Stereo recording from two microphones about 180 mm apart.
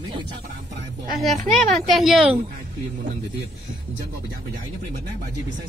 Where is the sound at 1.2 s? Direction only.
Centre (ahead or behind).